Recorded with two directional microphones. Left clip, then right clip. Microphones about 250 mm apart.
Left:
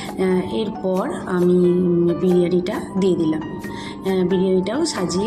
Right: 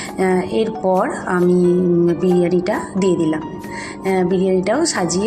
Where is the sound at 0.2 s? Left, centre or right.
Centre.